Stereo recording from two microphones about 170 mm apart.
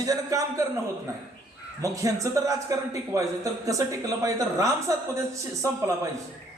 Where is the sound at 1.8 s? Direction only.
20° right (ahead or behind).